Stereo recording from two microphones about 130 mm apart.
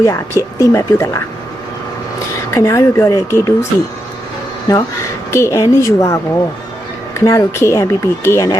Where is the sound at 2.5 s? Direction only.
25° left (ahead or behind).